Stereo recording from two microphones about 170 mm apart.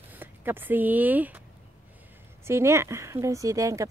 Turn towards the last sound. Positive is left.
turn(degrees=-20)  # may be behind; listen again after turning